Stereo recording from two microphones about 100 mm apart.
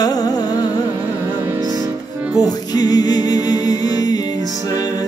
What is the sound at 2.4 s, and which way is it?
Music, 40° left (ahead or behind).